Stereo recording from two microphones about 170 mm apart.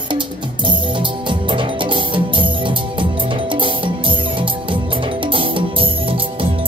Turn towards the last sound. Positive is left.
turn(degrees=-30)  # may be behind; listen again after turning